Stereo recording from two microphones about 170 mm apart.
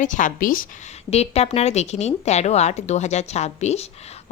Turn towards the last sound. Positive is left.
turn(degrees=40)  # may be behind; listen again after turning